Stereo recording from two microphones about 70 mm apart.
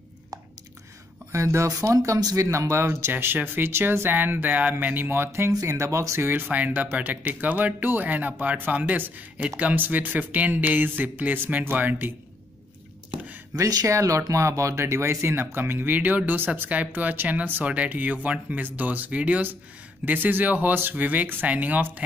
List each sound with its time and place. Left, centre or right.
1.3 s speech: right
2.5 s speech: right
13.6 s speech: right